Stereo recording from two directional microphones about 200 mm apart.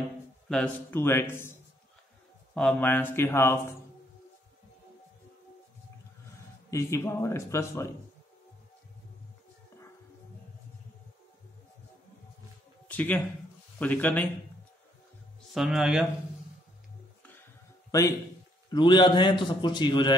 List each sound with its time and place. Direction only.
0.5 s speech: 10° left (ahead or behind)
2.5 s speech: 5° left (ahead or behind)
6.7 s speech: 15° left (ahead or behind)
12.8 s speech: 10° left (ahead or behind)
15.5 s speech: centre (ahead or behind)
18.7 s a man's voice: 25° left (ahead or behind)